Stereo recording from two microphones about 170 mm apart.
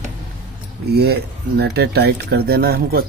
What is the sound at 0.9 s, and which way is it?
Speech, 70° right (ahead or behind).